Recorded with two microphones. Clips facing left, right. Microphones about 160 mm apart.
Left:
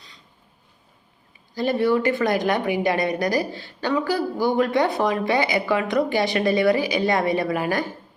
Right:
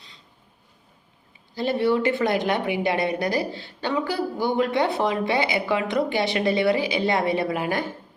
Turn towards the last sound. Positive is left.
turn(degrees=-20)  # may be behind; listen again after turning